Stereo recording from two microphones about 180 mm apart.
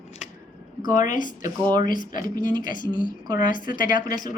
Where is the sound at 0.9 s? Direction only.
45° left (ahead or behind).